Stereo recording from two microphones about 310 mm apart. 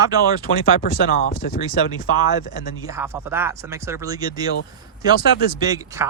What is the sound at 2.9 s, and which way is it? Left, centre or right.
Speech, centre.